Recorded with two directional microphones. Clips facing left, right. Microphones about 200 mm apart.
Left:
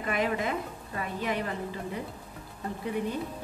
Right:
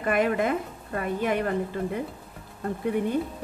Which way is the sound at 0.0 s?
55° right (ahead or behind).